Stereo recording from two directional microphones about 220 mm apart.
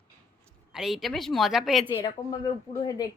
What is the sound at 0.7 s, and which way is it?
A woman's voice, centre (ahead or behind).